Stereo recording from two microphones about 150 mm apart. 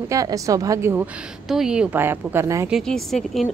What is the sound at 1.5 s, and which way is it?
A woman's voice, 5° right (ahead or behind).